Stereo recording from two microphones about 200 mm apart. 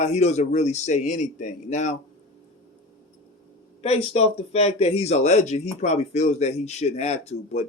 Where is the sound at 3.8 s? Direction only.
30° left (ahead or behind).